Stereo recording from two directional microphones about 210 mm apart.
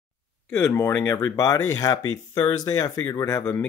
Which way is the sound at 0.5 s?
10° left (ahead or behind).